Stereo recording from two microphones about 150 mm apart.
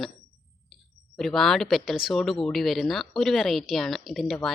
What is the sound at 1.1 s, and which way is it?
A woman's voice, centre (ahead or behind).